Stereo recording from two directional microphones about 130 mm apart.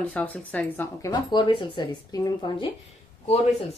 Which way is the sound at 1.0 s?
35° left (ahead or behind).